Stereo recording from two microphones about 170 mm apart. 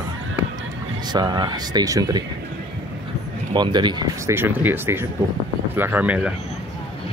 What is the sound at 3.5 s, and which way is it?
Speech, 25° right (ahead or behind).